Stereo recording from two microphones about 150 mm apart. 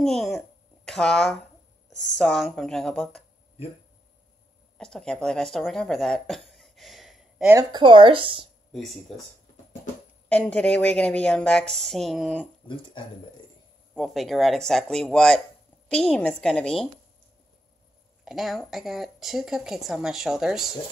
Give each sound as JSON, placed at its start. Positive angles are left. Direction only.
{"t": 0.0, "sound": "speech", "side_deg": 0}
{"t": 4.7, "sound": "speech", "side_deg": 5}
{"t": 7.5, "sound": "speech", "side_deg": -30}
{"t": 10.2, "sound": "speech", "side_deg": 10}
{"t": 12.6, "sound": "speech", "side_deg": 35}
{"t": 13.9, "sound": "speech", "side_deg": 0}
{"t": 18.2, "sound": "speech", "side_deg": 0}